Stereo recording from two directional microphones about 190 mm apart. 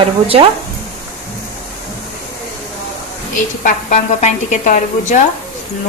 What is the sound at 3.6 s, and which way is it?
A woman's voice, 40° left (ahead or behind).